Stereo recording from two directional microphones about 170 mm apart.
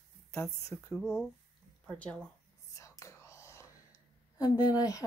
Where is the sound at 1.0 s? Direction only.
Centre (ahead or behind).